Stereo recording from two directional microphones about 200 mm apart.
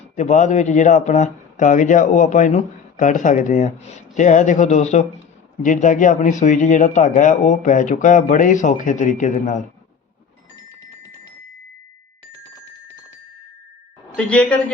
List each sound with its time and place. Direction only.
0.2 s speech: 35° left (ahead or behind)
14.3 s speech: 5° left (ahead or behind)